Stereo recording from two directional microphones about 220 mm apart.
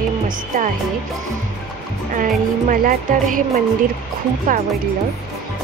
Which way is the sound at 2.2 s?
35° right (ahead or behind).